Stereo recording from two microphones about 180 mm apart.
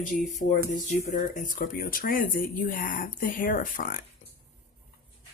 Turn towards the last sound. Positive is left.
turn(degrees=50)  # may be behind; listen again after turning